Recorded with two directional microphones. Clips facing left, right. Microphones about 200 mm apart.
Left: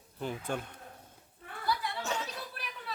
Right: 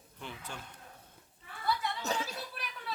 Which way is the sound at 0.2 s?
45° left (ahead or behind).